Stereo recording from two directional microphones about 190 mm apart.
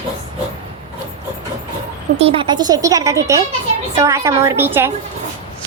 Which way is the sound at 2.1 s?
30° right (ahead or behind).